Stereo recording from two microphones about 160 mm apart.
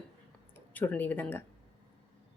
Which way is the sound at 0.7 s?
10° left (ahead or behind).